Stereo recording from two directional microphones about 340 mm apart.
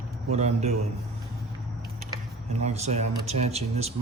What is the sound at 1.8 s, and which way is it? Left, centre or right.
Speech, centre.